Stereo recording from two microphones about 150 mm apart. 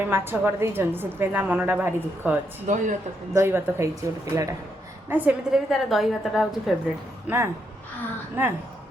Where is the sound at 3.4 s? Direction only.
15° right (ahead or behind).